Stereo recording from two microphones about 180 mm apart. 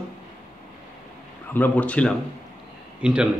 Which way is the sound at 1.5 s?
10° left (ahead or behind).